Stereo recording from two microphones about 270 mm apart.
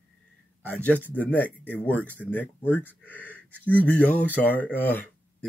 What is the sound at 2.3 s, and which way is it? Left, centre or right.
Speech, centre.